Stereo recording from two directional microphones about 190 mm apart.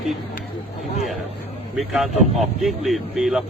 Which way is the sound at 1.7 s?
Centre (ahead or behind).